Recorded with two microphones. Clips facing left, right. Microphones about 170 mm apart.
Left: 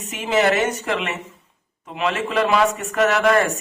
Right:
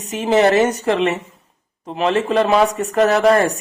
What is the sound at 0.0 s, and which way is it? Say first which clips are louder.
Speech: right 5 dB; 35° right (ahead or behind).